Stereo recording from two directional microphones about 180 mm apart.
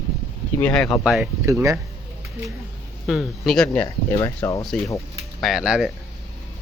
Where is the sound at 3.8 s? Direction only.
15° left (ahead or behind).